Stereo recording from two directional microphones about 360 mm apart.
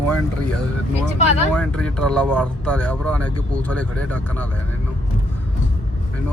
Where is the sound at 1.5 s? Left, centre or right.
Centre.